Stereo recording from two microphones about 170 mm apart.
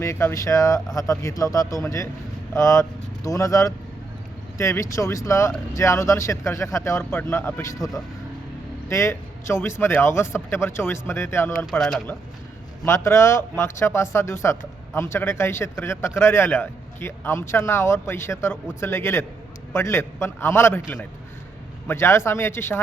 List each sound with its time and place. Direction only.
0.0 s speech: 15° left (ahead or behind)
8.9 s speech: 15° left (ahead or behind)
11.8 s speech: 5° left (ahead or behind)
12.8 s speech: 15° left (ahead or behind)